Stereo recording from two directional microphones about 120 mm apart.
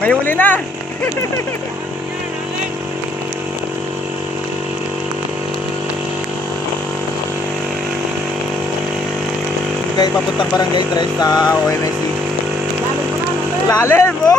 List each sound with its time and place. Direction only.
0.0 s speech: 15° left (ahead or behind)
10.6 s speech: 35° left (ahead or behind)
13.7 s speech: 25° left (ahead or behind)